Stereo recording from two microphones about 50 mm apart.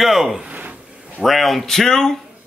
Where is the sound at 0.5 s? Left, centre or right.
Right.